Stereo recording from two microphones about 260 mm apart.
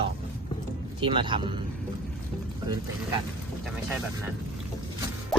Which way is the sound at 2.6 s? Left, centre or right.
Centre.